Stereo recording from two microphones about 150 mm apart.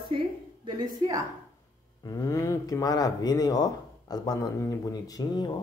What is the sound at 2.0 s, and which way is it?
Speech, 20° left (ahead or behind).